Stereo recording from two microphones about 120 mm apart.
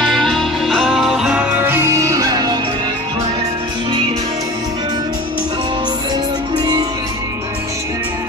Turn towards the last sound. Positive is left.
turn(degrees=-35)  # may be behind; listen again after turning